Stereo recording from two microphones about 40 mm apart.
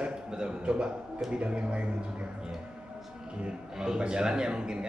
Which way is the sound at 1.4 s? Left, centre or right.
Right.